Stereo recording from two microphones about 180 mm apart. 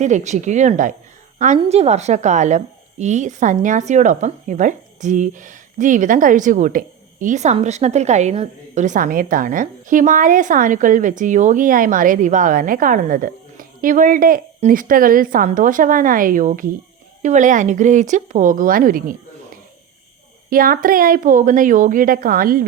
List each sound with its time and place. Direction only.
0.0 s speech: 40° right (ahead or behind)
20.5 s speech: 50° right (ahead or behind)